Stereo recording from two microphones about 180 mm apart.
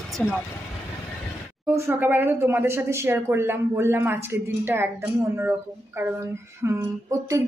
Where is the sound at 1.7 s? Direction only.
15° right (ahead or behind).